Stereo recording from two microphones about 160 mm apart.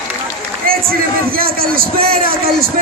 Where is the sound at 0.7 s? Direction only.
65° right (ahead or behind).